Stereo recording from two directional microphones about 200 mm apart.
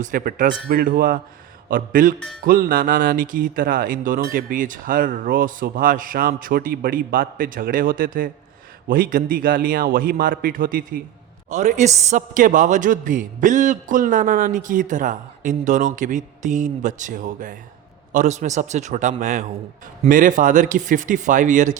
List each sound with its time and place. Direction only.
0.0 s a woman's voice: 45° right (ahead or behind)
2.1 s speech: centre (ahead or behind)
2.4 s a man's voice: 45° right (ahead or behind)